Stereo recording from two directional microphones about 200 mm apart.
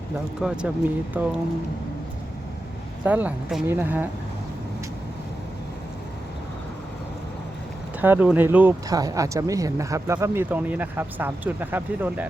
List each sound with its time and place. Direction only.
0.4 s speech: 5° right (ahead or behind)
3.0 s speech: 5° right (ahead or behind)
8.0 s speech: 10° right (ahead or behind)